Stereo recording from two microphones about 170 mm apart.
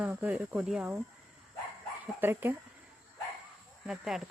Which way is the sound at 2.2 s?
10° right (ahead or behind).